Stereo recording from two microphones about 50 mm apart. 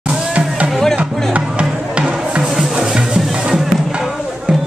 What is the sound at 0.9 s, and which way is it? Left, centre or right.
Music, right.